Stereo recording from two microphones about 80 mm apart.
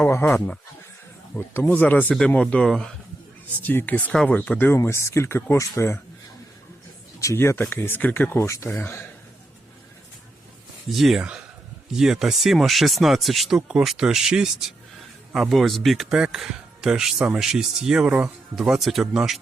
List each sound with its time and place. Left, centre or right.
0.0 s a sound: left
0.3 s speech: centre
1.4 s speech: left
2.4 s speech: centre
3.6 s speech: left
4.8 s speech: left
7.2 s speech: left
10.9 s speech: centre